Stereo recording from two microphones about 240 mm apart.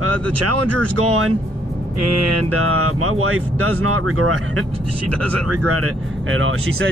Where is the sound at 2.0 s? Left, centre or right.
Right.